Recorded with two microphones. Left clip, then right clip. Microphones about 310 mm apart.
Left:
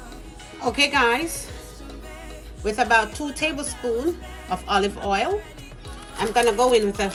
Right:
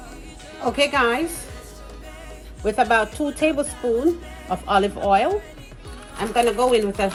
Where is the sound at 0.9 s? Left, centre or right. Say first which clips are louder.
Even; centre.